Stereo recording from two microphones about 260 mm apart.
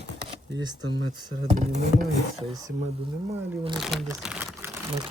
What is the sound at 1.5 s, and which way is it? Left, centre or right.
Speech, right.